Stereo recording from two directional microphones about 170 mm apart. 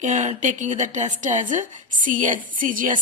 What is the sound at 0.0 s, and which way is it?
A woman's voice, 45° right (ahead or behind).